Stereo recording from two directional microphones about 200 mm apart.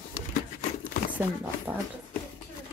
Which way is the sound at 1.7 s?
5° right (ahead or behind).